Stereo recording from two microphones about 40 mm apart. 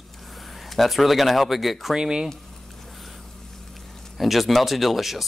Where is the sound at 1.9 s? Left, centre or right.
Centre.